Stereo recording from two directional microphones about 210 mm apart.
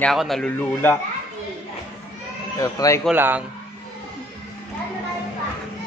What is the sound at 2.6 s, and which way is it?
Speech, 15° left (ahead or behind).